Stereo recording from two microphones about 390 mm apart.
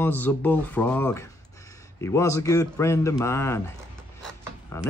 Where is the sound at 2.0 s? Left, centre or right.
Centre.